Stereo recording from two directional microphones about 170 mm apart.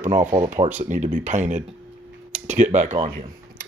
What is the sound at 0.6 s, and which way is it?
Speech, 30° right (ahead or behind).